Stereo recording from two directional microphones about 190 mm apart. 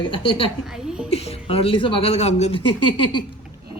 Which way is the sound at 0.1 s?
25° left (ahead or behind).